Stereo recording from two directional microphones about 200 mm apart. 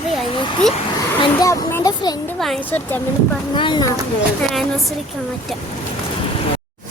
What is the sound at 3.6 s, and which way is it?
Speech, 20° left (ahead or behind).